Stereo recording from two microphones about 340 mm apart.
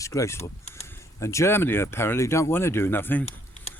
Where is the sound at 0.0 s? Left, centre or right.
Centre.